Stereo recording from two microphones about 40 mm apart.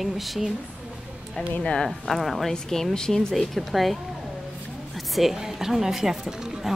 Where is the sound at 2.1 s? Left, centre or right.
Centre.